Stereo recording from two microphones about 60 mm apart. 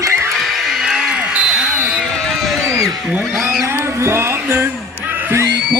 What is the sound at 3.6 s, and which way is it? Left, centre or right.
Music, right.